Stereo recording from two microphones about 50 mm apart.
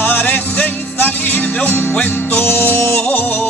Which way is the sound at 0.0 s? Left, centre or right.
Left.